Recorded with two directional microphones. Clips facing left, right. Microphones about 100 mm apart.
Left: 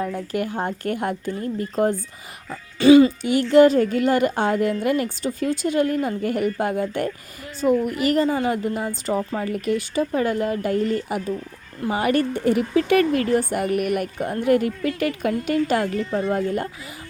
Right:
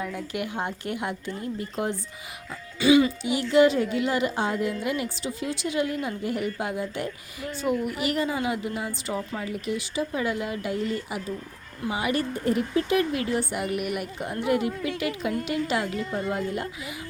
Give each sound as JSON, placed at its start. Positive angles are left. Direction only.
{"t": 0.0, "sound": "speech", "side_deg": 40}
{"t": 12.7, "sound": "speech", "side_deg": 65}